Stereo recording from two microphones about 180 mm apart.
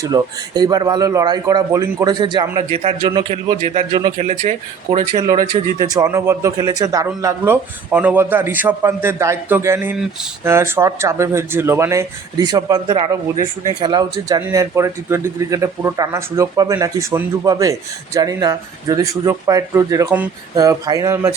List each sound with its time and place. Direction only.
0.0 s speech: 20° right (ahead or behind)
5.8 s speech: 20° right (ahead or behind)
20.6 s speech: 20° right (ahead or behind)